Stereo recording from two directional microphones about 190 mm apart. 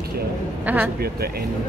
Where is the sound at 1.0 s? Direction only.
55° right (ahead or behind).